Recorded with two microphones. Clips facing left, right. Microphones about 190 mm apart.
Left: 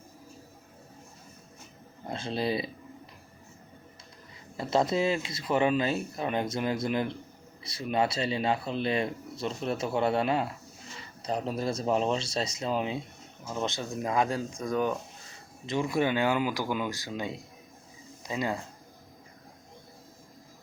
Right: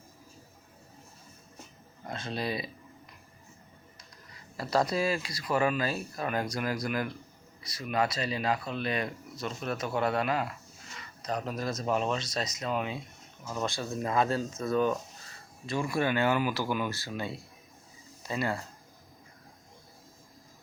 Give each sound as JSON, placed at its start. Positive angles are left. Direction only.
{"t": 2.0, "sound": "speech", "side_deg": 30}
{"t": 4.5, "sound": "speech", "side_deg": 25}